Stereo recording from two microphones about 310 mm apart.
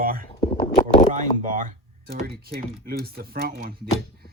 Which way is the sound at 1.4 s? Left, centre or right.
Right.